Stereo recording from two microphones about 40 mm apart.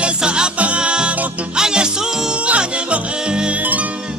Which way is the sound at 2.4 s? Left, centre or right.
Right.